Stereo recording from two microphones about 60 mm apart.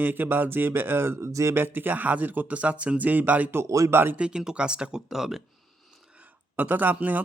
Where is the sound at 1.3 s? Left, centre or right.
Right.